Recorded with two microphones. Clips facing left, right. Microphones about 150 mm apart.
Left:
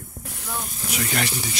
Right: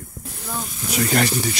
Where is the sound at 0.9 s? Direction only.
40° right (ahead or behind).